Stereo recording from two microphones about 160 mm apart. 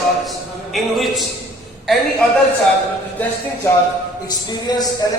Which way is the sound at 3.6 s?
15° left (ahead or behind).